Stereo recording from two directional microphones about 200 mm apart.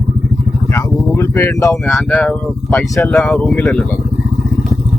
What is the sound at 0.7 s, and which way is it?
Speech, 15° left (ahead or behind).